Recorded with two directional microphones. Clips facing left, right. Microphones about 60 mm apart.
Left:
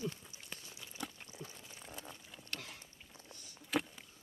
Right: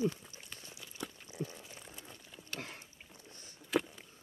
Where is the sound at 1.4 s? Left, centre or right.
Right.